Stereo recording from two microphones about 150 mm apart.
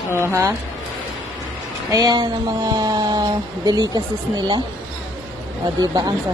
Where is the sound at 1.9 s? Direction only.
25° right (ahead or behind).